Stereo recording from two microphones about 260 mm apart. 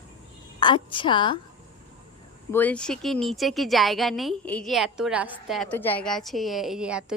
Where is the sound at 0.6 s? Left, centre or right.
Centre.